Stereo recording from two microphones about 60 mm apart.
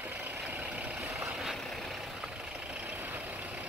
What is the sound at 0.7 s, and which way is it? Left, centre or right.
Vehicle, centre.